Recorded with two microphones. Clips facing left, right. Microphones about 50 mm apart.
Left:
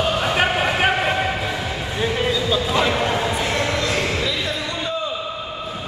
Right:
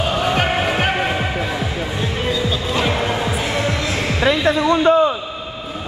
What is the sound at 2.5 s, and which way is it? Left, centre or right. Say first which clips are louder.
Music: left 1 dB; centre.